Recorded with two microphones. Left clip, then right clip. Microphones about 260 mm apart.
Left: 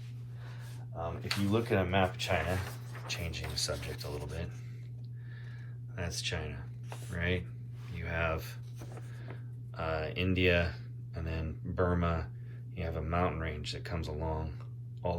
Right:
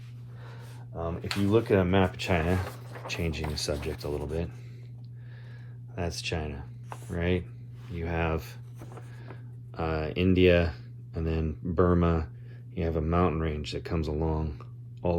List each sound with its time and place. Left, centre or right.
0.9 s speech: right
6.0 s speech: centre
7.9 s writing: centre
12.7 s speech: right